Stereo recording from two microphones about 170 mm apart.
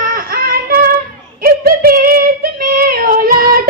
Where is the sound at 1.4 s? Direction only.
60° right (ahead or behind).